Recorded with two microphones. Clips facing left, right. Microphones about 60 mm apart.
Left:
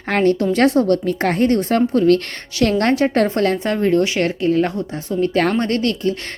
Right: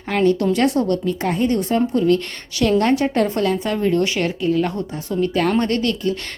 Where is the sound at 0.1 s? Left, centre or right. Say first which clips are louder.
Left 1 dB; left.